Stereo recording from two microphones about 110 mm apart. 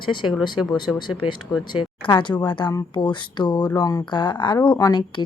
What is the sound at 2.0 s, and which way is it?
A woman's voice, 45° left (ahead or behind).